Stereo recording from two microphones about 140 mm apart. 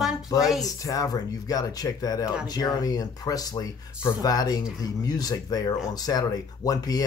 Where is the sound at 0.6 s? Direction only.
25° left (ahead or behind).